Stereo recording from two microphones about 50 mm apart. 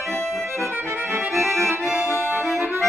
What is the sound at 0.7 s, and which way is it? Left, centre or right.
Accordion, right.